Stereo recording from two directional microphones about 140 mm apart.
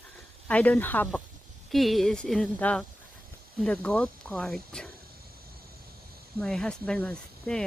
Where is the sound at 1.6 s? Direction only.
Centre (ahead or behind).